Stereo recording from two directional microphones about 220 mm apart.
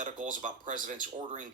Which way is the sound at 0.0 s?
35° right (ahead or behind).